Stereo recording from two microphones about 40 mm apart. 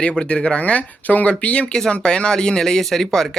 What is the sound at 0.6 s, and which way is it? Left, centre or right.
Speech, left.